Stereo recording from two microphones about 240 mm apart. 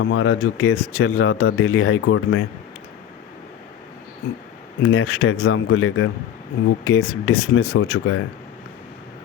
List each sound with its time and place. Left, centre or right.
0.0 s speech: left
4.8 s speech: left